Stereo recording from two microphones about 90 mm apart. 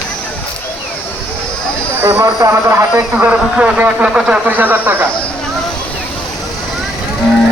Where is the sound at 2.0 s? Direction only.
25° right (ahead or behind).